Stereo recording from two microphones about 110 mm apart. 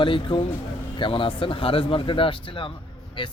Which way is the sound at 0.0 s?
50° left (ahead or behind).